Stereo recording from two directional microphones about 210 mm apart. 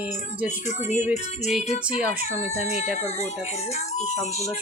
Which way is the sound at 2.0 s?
10° right (ahead or behind).